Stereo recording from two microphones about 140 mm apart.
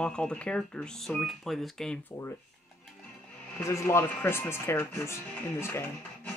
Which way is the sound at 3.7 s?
20° left (ahead or behind).